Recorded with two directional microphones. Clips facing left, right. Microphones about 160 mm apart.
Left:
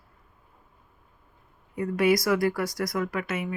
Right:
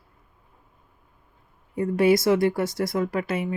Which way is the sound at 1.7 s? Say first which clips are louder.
Right 3 dB; 30° right (ahead or behind).